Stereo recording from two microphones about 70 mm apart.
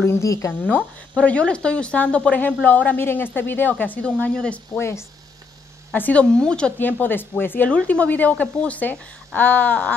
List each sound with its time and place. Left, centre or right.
0.0 s speech: left
0.5 s speech: left
4.3 s speech: centre
4.7 s speech: left
5.9 s speech: left
6.3 s speech: centre
6.8 s speech: left